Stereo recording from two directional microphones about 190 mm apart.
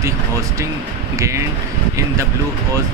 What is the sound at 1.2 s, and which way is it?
Speech, 15° right (ahead or behind).